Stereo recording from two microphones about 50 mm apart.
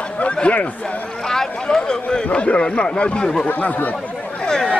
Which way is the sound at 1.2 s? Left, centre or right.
Centre.